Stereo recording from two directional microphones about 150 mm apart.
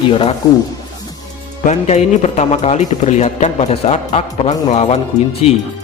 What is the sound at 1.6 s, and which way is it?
A man's voice, 50° left (ahead or behind).